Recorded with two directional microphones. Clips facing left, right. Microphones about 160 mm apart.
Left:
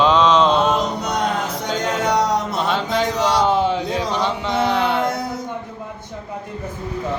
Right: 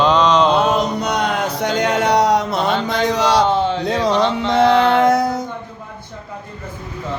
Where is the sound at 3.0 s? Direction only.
80° right.